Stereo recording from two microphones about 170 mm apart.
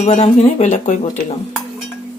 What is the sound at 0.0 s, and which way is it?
Speech, 40° left (ahead or behind).